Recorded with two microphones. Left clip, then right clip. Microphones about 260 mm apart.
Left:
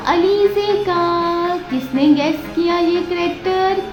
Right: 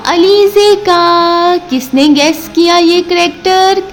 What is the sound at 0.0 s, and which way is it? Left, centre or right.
Child singing, right.